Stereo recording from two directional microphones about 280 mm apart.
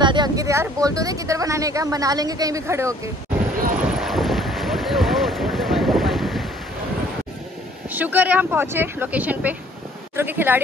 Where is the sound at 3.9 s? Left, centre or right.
Centre.